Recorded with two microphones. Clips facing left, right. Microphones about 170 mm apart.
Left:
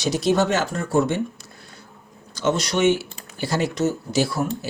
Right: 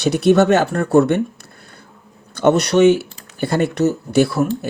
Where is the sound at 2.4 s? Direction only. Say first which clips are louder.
Right 8 dB; 60° right (ahead or behind).